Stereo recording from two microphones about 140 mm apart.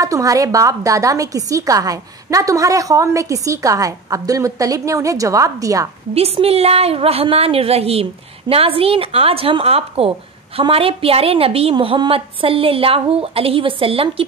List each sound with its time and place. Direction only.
0.0 s a woman's voice: 25° right (ahead or behind)
6.1 s a woman's voice: 45° right (ahead or behind)